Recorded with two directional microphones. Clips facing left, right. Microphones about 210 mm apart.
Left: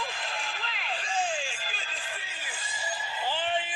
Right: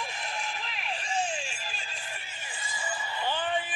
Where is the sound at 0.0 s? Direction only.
90° left.